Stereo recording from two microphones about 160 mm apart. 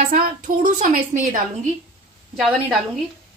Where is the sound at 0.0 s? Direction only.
55° right (ahead or behind).